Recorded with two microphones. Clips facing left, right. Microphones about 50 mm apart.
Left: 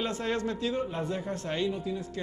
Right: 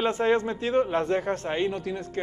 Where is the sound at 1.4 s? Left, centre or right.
Right.